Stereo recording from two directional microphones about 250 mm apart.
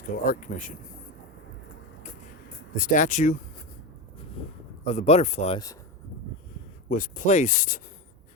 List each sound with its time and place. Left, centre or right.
0.3 s speech: left
2.7 s speech: left
4.4 s speech: left
6.9 s speech: left